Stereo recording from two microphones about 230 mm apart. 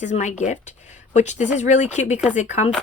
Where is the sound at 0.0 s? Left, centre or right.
Left.